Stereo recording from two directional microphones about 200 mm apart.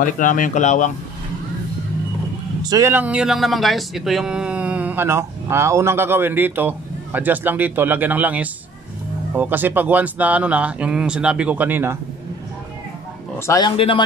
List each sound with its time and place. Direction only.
0.0 s speech: 40° left (ahead or behind)
2.6 s speech: 15° right (ahead or behind)
13.5 s a man's voice: 20° left (ahead or behind)